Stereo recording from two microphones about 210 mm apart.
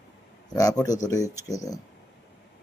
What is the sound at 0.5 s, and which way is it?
Speech, 15° left (ahead or behind).